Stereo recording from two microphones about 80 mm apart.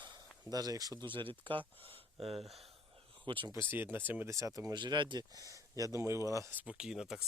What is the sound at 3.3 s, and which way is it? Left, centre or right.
Speech, right.